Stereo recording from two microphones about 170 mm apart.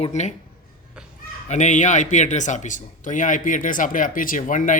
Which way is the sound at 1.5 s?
45° left (ahead or behind).